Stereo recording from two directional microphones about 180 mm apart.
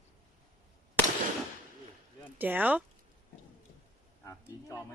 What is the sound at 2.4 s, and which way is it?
Speech, 10° right (ahead or behind).